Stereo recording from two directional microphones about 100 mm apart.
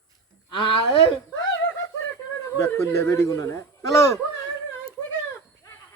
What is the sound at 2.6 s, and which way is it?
Speech, 25° left (ahead or behind).